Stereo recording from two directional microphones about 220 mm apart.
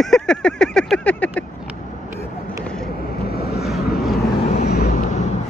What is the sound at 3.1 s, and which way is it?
Vehicle, 45° left (ahead or behind).